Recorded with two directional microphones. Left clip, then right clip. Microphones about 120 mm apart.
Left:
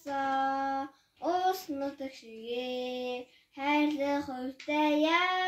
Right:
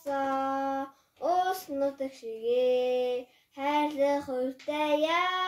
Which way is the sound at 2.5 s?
15° right (ahead or behind).